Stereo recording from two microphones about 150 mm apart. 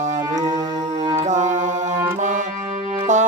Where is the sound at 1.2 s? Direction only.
55° right (ahead or behind).